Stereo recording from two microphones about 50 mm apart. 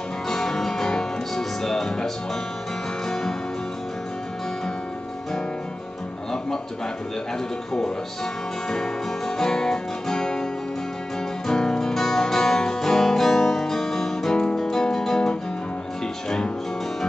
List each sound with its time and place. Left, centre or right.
0.3 s music: centre
8.6 s music: centre
11.4 s music: centre